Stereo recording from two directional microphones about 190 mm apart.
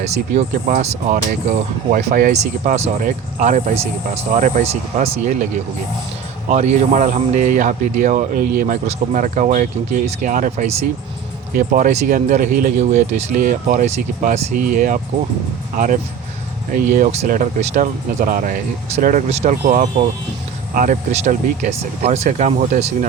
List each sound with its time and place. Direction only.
0.0 s speech: 35° right (ahead or behind)
6.5 s speech: 35° right (ahead or behind)